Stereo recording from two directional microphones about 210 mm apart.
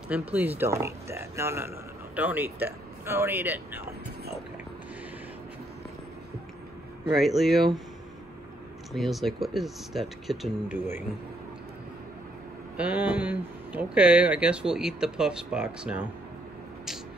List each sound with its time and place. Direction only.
0.1 s speech: 5° right (ahead or behind)
7.2 s speech: centre (ahead or behind)
8.9 s speech: centre (ahead or behind)
12.7 s speech: 5° right (ahead or behind)